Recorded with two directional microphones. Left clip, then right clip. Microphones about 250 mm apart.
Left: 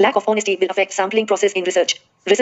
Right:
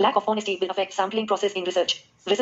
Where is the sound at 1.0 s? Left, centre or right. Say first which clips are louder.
Left 6 dB; left.